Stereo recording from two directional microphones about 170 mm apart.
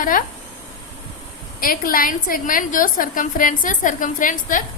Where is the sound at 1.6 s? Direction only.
55° left (ahead or behind).